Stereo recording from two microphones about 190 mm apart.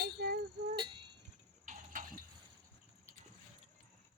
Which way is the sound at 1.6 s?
45° right (ahead or behind).